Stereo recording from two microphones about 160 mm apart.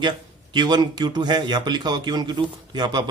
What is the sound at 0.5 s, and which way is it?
Speech, 25° right (ahead or behind).